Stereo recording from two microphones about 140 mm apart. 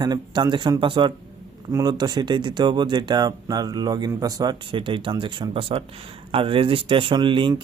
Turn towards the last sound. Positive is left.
turn(degrees=-35)  # may be behind; listen again after turning